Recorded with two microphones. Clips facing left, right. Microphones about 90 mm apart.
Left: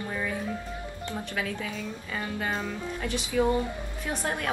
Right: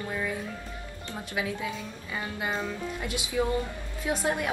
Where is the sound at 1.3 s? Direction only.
15° right (ahead or behind).